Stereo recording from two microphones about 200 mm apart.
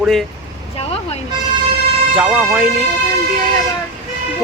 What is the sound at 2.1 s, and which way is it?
Speech, 5° right (ahead or behind).